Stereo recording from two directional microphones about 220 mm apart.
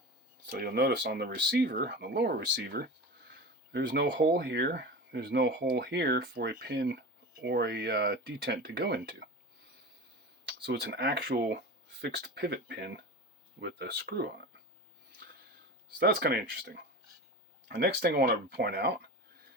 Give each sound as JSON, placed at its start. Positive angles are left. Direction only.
{"t": 0.4, "sound": "speech", "side_deg": -45}
{"t": 10.6, "sound": "speech", "side_deg": -50}
{"t": 16.0, "sound": "speech", "side_deg": -45}